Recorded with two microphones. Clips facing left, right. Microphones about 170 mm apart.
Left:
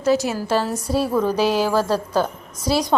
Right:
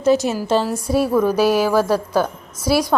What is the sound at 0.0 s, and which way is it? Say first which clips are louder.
A woman's voice: right 3 dB; 20° right (ahead or behind).